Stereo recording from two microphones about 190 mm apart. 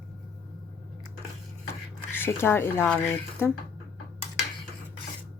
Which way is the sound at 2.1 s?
10° left (ahead or behind).